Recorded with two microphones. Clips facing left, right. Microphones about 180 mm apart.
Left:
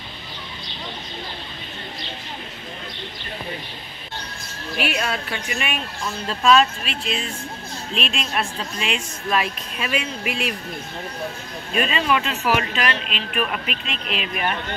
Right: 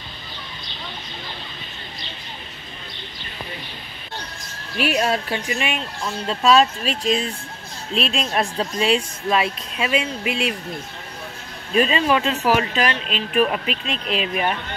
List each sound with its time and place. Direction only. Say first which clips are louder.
4.7 s a woman's voice: right 4 dB; 40° right (ahead or behind)
9.3 s speech: right 2 dB; 25° right (ahead or behind)
11.7 s a woman's voice: right 3 dB; 30° right (ahead or behind)